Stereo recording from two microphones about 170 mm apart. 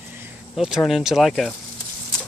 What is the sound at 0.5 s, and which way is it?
Speech, centre (ahead or behind).